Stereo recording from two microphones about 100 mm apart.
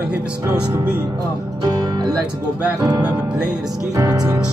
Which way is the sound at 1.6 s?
40° right (ahead or behind).